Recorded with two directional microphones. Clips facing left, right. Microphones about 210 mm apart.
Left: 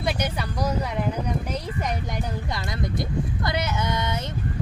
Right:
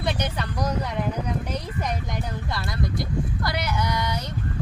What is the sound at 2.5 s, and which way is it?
Speech, 20° left (ahead or behind).